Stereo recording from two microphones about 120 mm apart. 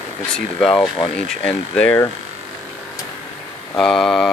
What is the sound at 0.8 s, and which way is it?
Speech, 45° left (ahead or behind).